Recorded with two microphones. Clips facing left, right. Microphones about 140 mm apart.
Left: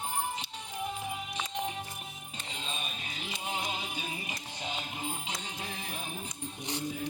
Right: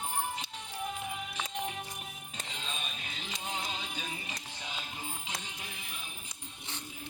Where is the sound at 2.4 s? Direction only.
5° left (ahead or behind); by 6.1 s 45° left (ahead or behind).